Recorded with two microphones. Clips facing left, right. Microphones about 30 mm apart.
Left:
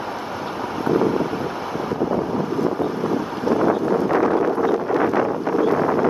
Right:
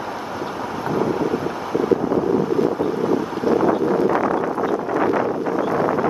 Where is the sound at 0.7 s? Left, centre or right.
Centre.